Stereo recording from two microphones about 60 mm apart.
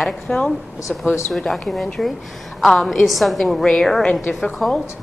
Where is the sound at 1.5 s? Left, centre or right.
Centre.